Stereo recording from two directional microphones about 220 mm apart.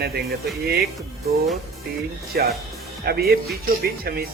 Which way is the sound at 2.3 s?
45° right (ahead or behind).